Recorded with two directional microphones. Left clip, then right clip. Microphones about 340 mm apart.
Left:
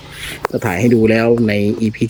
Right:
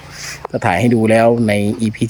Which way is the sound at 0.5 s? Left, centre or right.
Centre.